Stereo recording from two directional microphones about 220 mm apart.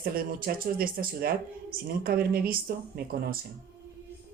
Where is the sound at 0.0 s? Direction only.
40° right (ahead or behind).